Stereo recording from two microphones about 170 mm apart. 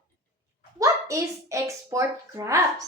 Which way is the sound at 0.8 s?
20° right (ahead or behind).